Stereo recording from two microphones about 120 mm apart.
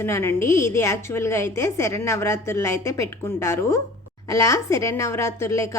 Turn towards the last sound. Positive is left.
turn(degrees=25)  # may be behind; listen again after turning